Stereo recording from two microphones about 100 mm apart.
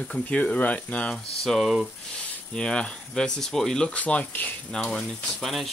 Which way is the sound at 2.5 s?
10° left (ahead or behind).